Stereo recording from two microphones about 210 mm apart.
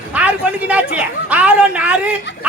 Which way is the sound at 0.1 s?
5° right (ahead or behind).